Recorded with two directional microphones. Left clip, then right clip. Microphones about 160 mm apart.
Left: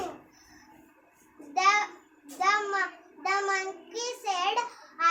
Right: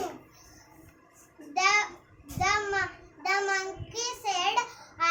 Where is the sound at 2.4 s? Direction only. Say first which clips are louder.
Left 1 dB; 20° left (ahead or behind).